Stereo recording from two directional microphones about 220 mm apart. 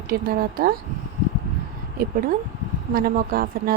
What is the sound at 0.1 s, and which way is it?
Speech, 40° right (ahead or behind).